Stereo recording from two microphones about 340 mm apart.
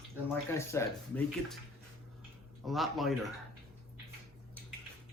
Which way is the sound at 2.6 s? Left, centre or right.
Centre.